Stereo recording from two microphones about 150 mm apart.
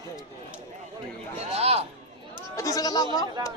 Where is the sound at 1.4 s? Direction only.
45° right (ahead or behind).